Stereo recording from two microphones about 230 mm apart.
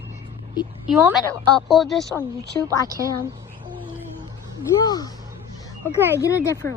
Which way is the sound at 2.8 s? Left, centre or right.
Centre.